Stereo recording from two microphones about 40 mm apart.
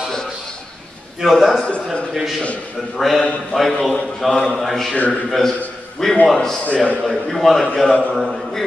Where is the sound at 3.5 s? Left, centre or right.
Centre.